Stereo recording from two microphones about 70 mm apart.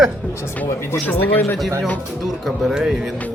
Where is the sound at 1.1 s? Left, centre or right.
Left.